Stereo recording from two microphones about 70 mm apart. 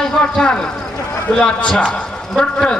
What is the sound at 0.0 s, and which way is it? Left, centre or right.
A man's voice, centre.